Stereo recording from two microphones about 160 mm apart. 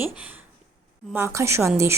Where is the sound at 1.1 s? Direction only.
15° right (ahead or behind).